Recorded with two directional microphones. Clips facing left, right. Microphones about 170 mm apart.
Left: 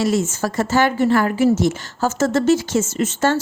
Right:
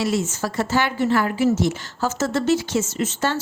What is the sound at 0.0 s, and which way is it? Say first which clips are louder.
A woman's voice: left 3 dB; 45° left (ahead or behind).